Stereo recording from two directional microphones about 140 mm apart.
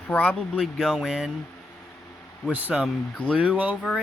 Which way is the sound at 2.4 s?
10° right (ahead or behind).